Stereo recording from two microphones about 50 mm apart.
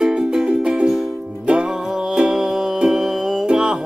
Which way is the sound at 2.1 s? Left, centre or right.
Centre.